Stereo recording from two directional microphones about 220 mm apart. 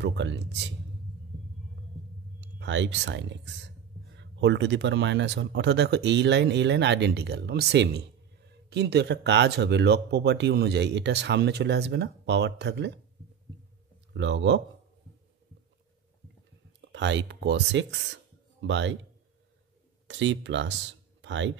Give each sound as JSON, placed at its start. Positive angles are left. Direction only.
{"t": 0.0, "sound": "speech", "side_deg": -55}
{"t": 2.4, "sound": "speech", "side_deg": -55}
{"t": 14.1, "sound": "speech", "side_deg": -55}
{"t": 16.9, "sound": "speech", "side_deg": -55}
{"t": 20.1, "sound": "speech", "side_deg": -55}